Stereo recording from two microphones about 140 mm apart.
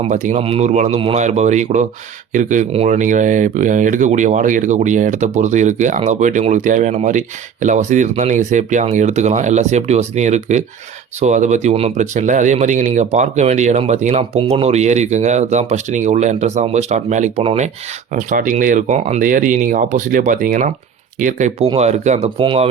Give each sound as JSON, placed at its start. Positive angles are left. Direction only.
{"t": 0.1, "sound": "speech", "side_deg": -60}
{"t": 0.4, "sound": "speech", "side_deg": -50}
{"t": 18.1, "sound": "speech", "side_deg": -70}
{"t": 22.4, "sound": "speech", "side_deg": -40}